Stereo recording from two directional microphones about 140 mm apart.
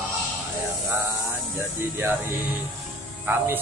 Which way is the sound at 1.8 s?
15° right (ahead or behind).